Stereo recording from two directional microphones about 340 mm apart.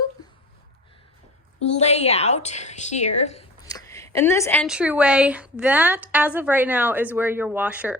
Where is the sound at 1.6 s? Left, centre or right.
Centre.